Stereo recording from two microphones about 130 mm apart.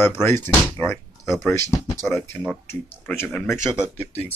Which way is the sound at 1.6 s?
25° left (ahead or behind).